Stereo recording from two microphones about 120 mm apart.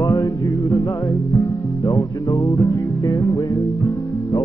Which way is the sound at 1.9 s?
25° left (ahead or behind).